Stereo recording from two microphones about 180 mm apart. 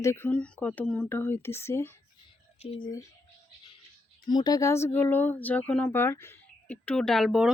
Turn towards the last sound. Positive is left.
turn(degrees=0)  # may be behind; listen again after turning